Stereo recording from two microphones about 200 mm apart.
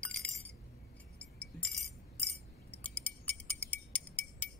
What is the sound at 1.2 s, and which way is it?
Music, 5° left (ahead or behind).